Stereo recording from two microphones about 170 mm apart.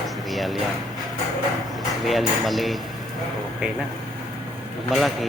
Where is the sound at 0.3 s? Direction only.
Centre (ahead or behind).